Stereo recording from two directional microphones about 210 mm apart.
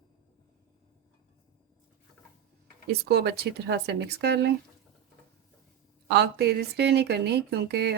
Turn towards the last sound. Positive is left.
turn(degrees=-50)  # may be behind; listen again after turning